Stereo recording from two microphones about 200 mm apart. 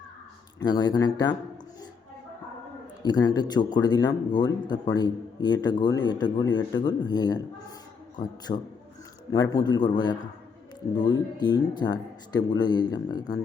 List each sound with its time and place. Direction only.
0.6 s speech: 20° left (ahead or behind)
3.0 s speech: 20° left (ahead or behind)